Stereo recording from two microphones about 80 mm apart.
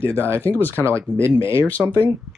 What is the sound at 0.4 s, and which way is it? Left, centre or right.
Speech, left.